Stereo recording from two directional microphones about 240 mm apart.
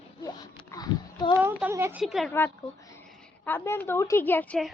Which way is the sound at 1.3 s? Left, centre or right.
Centre.